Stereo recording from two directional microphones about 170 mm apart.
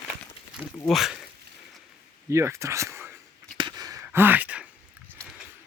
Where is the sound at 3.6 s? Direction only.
25° right (ahead or behind).